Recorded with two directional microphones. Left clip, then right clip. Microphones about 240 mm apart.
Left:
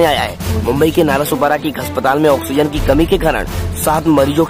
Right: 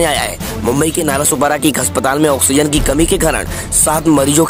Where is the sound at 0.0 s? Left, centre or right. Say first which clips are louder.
Left 2 dB; right.